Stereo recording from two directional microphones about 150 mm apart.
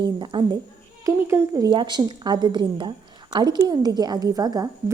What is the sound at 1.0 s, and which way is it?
A woman's voice, 20° right (ahead or behind).